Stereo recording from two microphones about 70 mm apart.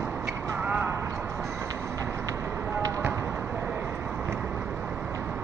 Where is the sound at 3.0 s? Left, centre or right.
Right.